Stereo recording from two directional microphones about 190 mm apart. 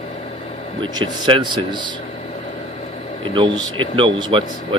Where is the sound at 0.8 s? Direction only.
25° right (ahead or behind).